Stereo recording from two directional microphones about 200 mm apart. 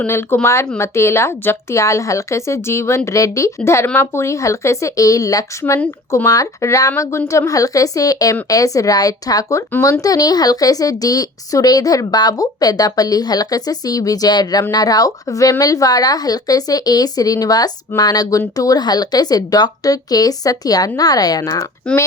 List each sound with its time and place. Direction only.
0.0 s speech: 10° left (ahead or behind)